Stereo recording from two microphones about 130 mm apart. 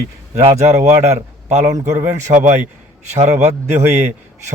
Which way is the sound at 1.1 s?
55° right (ahead or behind).